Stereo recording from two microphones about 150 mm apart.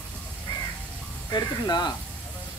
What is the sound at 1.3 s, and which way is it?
Speech, 30° left (ahead or behind).